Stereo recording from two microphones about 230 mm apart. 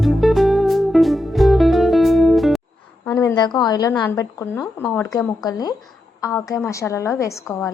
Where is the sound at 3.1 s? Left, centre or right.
Centre.